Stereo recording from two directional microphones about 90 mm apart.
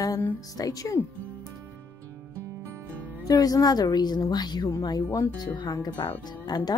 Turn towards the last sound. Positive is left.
turn(degrees=50)  # may be behind; listen again after turning